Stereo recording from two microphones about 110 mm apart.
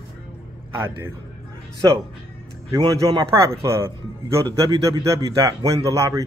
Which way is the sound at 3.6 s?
25° right (ahead or behind).